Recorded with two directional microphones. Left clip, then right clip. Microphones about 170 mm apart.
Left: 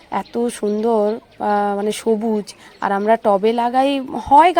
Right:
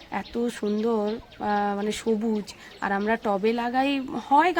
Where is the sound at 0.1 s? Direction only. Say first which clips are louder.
Left 8 dB; 30° left (ahead or behind).